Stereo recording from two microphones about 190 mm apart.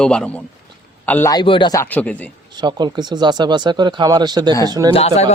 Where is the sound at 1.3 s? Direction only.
25° left (ahead or behind).